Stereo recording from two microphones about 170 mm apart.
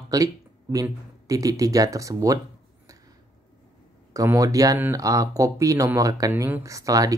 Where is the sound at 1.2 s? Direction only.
20° right (ahead or behind).